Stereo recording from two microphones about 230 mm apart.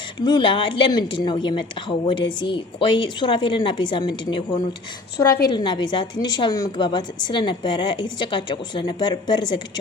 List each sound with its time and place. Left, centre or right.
0.2 s a woman's voice: centre